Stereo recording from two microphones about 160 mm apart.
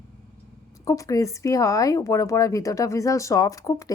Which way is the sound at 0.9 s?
20° left (ahead or behind).